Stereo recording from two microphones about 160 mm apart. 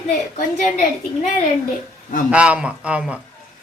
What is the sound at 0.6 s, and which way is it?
Speech, 50° left (ahead or behind).